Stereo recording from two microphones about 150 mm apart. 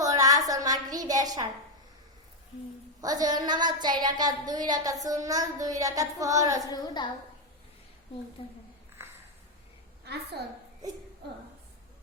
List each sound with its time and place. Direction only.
0.0 s a sound: 25° right (ahead or behind)
3.0 s a woman's voice: 25° right (ahead or behind)
6.7 s a woman's voice: 25° left (ahead or behind)
8.4 s a woman's voice: 35° left (ahead or behind)
10.0 s a woman's voice: 90° right